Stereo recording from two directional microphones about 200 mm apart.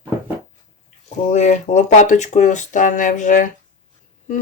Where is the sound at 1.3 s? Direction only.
40° left (ahead or behind).